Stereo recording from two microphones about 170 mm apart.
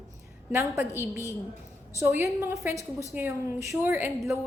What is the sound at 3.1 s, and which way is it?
A woman's voice, 15° right (ahead or behind).